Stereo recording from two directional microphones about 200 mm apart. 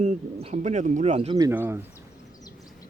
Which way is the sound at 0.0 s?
35° right (ahead or behind).